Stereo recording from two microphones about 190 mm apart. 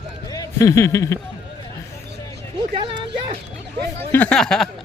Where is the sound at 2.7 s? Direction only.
25° right (ahead or behind).